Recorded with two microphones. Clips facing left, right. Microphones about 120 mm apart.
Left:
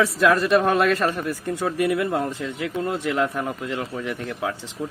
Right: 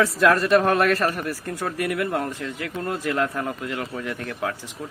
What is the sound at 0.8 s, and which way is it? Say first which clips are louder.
A man's voice: left 1 dB; 15° left (ahead or behind).